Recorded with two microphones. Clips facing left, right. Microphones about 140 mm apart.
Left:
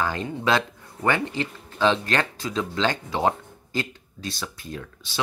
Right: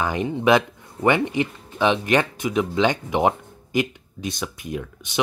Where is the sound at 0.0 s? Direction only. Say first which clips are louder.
Right 4 dB; 15° right (ahead or behind).